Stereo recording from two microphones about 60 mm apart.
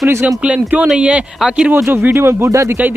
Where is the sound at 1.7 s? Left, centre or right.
Right.